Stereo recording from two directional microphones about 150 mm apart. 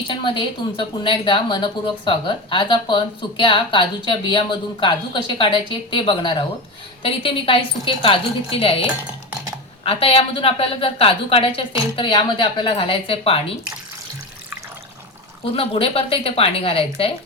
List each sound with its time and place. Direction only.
0.1 s a woman's voice: 35° left (ahead or behind)
15.5 s a woman's voice: 40° left (ahead or behind)